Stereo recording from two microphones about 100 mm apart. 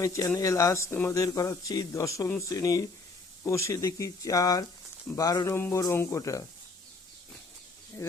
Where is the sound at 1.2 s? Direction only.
35° left (ahead or behind).